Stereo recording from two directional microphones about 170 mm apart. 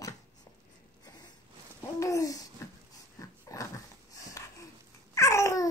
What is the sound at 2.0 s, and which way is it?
Babbling, 20° left (ahead or behind).